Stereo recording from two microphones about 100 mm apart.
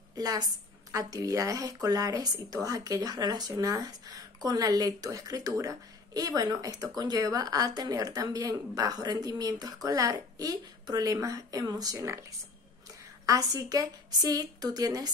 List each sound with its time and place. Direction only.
0.1 s a woman's voice: 40° right (ahead or behind)